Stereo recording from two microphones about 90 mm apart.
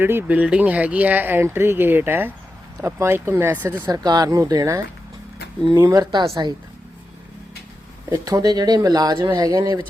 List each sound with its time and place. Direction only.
0.0 s speech: 25° right (ahead or behind)
3.8 s speech: 45° right (ahead or behind)
5.8 s speech: 40° right (ahead or behind)
6.1 s speech: 60° right (ahead or behind)
8.1 s speech: 40° right (ahead or behind)